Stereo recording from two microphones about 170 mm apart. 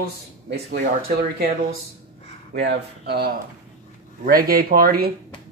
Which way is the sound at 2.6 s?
75° right (ahead or behind).